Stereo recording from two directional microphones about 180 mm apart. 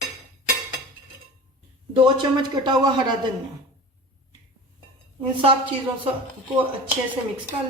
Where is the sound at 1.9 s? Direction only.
25° right (ahead or behind).